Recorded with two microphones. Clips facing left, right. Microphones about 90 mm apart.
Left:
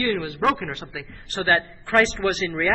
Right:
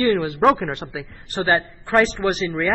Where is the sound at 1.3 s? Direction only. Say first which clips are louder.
Right 2 dB; 15° right (ahead or behind).